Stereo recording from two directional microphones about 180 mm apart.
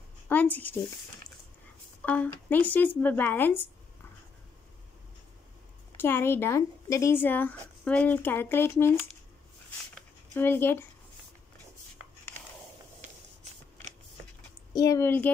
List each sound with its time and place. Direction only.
0.3 s speech: 10° left (ahead or behind)
2.0 s speech: 10° left (ahead or behind)
5.9 s speech: 10° left (ahead or behind)
10.3 s speech: 10° left (ahead or behind)
13.0 s spray: 40° right (ahead or behind)
14.7 s speech: 20° left (ahead or behind)